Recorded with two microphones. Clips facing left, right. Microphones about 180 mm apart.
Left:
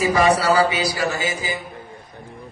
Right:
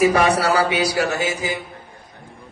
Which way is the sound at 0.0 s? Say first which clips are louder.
Right 1 dB; 65° right (ahead or behind).